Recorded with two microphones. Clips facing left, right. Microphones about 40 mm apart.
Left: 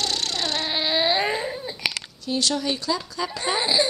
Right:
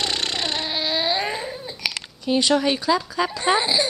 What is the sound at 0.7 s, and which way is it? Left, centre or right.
Baby cry, centre.